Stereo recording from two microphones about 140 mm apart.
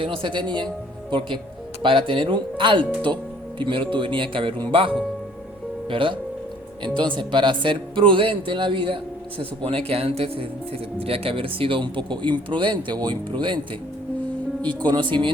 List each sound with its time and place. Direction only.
0.0 s speech: 40° right (ahead or behind)
1.8 s speech: 35° right (ahead or behind)
5.9 s speech: 40° right (ahead or behind)
14.6 s speech: 10° left (ahead or behind)
14.8 s speech: 35° right (ahead or behind)